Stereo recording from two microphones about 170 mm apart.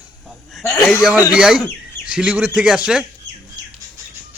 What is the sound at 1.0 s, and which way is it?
A man's voice, 5° right (ahead or behind).